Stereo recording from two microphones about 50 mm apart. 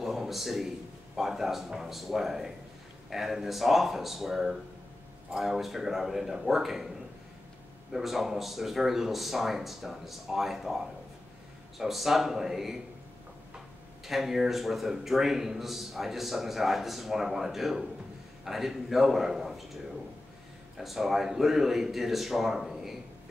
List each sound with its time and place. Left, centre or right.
0.0 s a sound: centre
1.1 s a man's voice: centre
7.9 s a man's voice: centre
11.8 s a man's voice: centre
14.0 s a man's voice: centre
20.7 s a man's voice: centre